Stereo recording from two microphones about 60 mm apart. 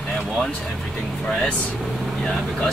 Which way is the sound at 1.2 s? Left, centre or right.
Centre.